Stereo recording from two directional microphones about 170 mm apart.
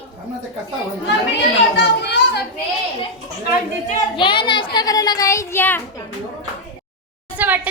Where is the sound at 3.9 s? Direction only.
30° left (ahead or behind); by 5.8 s 15° left (ahead or behind).